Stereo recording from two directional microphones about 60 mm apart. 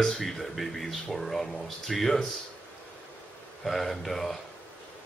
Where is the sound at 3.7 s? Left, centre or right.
Centre.